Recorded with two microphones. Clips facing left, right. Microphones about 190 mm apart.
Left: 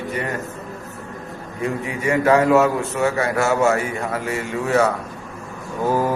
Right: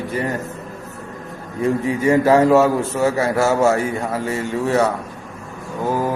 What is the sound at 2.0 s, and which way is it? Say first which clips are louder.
Speech: right 2 dB; 30° right (ahead or behind).